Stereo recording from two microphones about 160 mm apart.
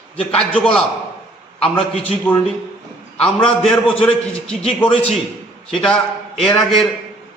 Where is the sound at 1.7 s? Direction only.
35° left (ahead or behind).